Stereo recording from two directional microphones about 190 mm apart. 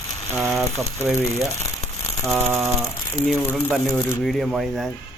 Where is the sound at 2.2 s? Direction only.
Centre (ahead or behind).